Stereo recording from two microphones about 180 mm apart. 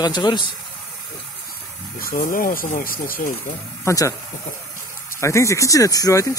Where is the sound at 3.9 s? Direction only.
15° left (ahead or behind).